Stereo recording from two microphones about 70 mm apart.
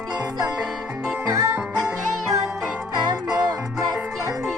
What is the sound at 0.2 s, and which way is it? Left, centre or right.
Music, right.